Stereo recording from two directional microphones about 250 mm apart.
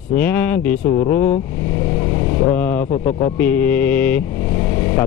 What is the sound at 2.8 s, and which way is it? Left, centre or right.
Speech, left.